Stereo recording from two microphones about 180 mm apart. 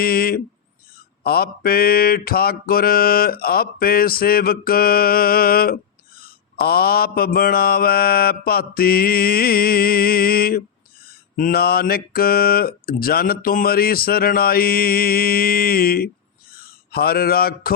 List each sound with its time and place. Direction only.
0.0 s speech: 55° left (ahead or behind)
1.2 s mantra: 60° left (ahead or behind)
16.5 s a sound: 55° left (ahead or behind)